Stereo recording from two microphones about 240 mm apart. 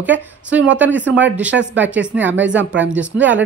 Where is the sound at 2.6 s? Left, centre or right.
Right.